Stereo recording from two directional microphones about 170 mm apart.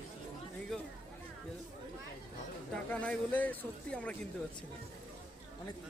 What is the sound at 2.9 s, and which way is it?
Speech, 5° left (ahead or behind).